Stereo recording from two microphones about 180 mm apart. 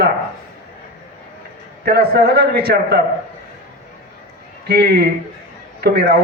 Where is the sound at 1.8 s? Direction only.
60° right (ahead or behind).